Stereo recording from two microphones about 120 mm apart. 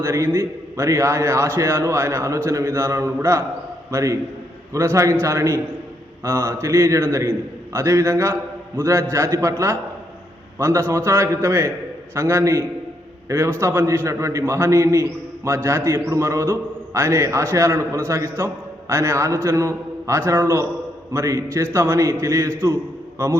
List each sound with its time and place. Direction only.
0.0 s a man's voice: 25° right (ahead or behind)